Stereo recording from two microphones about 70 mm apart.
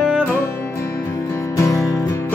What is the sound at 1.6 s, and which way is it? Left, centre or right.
Music, left.